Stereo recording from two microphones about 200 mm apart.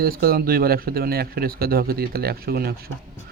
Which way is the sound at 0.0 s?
50° right (ahead or behind).